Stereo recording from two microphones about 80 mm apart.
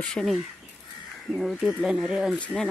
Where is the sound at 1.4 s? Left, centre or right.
Centre.